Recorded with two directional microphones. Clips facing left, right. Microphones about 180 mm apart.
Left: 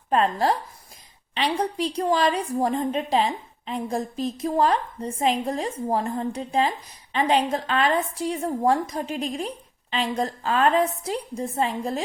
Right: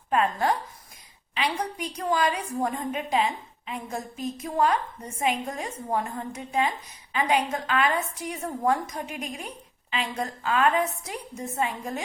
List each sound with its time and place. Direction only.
0.1 s a woman's voice: 35° left (ahead or behind)